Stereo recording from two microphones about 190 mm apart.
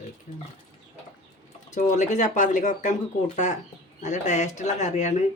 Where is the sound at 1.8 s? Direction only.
40° left (ahead or behind).